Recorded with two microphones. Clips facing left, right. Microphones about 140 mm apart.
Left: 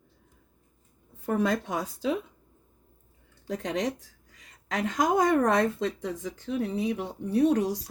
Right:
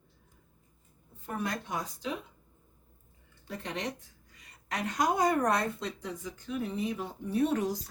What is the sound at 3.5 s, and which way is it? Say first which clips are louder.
Speech: left 7 dB; 90° left.